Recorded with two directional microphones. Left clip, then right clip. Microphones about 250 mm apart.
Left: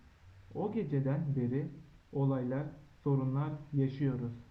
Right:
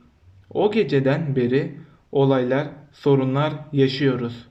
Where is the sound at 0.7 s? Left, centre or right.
Centre.